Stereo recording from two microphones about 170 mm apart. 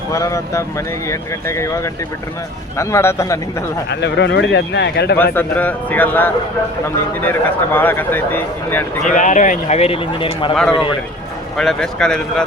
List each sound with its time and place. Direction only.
0.1 s speech: 20° left (ahead or behind)
3.8 s speech: 90° left
5.1 s speech: 10° left (ahead or behind)
9.1 s speech: 45° left (ahead or behind); by 10.5 s 30° left (ahead or behind)
10.5 s speech: centre (ahead or behind)